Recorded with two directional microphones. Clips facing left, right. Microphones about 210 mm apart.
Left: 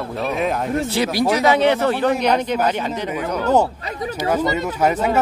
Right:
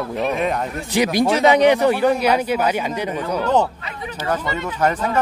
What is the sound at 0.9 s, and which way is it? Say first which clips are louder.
Speech: right 4 dB; 15° right (ahead or behind).